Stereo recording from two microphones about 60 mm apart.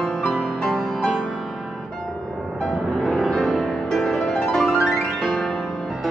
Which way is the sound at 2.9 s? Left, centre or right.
Centre.